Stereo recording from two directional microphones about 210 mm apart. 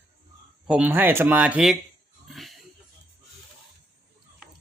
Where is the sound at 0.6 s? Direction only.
5° right (ahead or behind).